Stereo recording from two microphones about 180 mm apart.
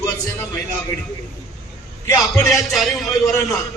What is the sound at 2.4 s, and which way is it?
Speech, centre (ahead or behind).